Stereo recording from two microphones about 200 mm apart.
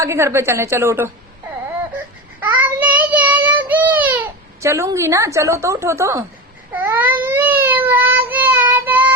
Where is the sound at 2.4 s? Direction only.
10° right (ahead or behind).